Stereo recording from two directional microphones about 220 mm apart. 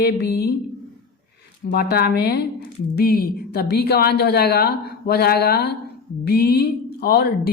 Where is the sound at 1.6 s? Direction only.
45° left (ahead or behind).